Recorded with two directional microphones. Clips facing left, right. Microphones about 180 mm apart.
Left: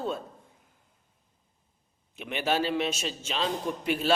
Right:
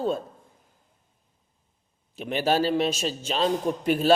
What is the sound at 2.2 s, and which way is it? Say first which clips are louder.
A man's voice: right 5 dB; 35° right (ahead or behind).